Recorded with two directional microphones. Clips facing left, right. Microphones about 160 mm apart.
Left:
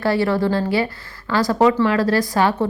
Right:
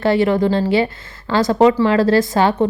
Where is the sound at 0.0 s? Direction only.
20° right (ahead or behind).